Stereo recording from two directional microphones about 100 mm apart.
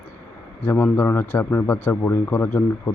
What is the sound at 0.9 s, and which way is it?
A man's voice, 25° left (ahead or behind).